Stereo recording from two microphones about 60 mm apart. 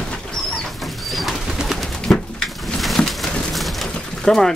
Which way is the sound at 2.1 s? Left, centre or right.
Centre.